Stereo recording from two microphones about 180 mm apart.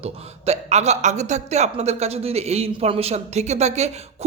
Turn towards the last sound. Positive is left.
turn(degrees=-35)  # may be behind; listen again after turning